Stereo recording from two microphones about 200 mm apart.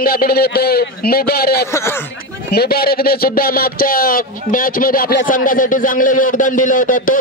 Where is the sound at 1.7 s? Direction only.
15° left (ahead or behind).